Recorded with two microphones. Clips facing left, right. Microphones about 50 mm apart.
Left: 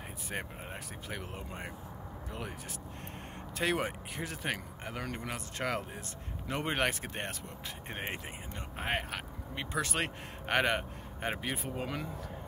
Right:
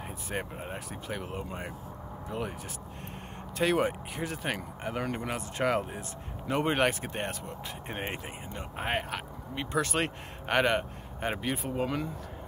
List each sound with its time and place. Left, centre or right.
1.3 s speech: centre
3.5 s speech: centre
4.8 s speech: centre
6.4 s speech: centre